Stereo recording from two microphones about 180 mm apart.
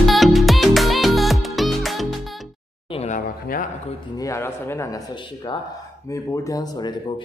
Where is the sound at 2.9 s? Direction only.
35° left (ahead or behind).